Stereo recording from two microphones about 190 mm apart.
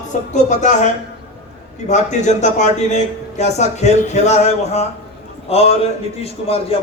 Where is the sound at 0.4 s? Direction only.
40° left (ahead or behind).